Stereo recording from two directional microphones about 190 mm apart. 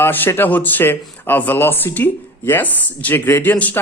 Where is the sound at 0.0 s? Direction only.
10° left (ahead or behind).